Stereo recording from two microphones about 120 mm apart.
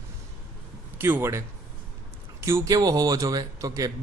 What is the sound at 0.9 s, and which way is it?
Speech, 20° right (ahead or behind).